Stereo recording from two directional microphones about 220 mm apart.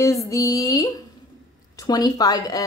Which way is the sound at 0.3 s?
15° left (ahead or behind).